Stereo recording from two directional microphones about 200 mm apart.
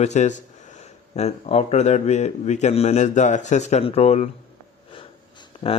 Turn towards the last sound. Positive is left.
turn(degrees=25)  # may be behind; listen again after turning